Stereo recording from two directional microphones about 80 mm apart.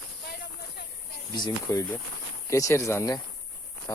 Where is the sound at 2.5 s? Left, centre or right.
Left.